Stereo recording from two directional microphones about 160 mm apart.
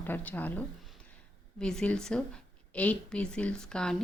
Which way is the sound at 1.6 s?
5° left (ahead or behind).